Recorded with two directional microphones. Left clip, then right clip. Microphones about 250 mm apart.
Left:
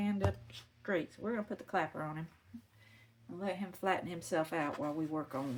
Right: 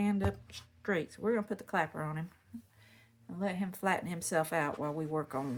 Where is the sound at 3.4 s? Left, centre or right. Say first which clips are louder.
Right 2 dB; right.